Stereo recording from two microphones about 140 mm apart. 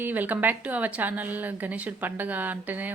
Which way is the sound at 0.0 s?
10° right (ahead or behind).